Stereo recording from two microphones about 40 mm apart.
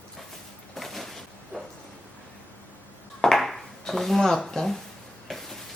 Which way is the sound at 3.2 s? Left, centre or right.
Centre.